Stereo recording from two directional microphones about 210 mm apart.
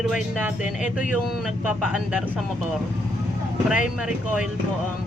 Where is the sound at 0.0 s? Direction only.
5° right (ahead or behind).